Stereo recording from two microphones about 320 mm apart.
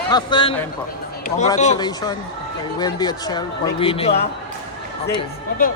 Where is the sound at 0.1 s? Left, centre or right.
Centre.